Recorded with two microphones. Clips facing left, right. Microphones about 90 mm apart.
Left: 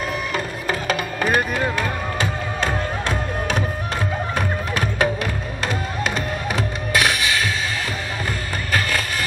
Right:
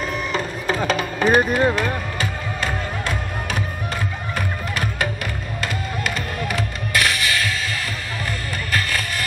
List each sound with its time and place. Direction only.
0.3 s music: 5° left (ahead or behind)
1.6 s speech: 25° right (ahead or behind)
6.9 s music: 20° left (ahead or behind)